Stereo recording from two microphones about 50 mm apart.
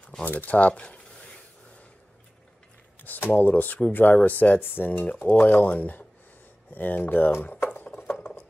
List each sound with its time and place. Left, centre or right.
0.2 s speech: left
3.0 s speech: left
7.6 s a sound: left